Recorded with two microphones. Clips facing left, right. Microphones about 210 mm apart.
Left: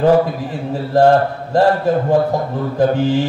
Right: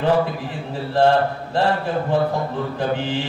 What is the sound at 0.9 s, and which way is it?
A man's voice, 40° left (ahead or behind).